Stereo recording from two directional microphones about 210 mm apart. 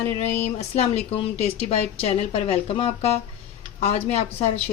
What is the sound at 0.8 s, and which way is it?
Speech, 30° left (ahead or behind).